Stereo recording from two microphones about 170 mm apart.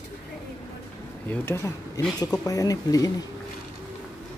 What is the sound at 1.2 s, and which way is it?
Speech, 15° left (ahead or behind).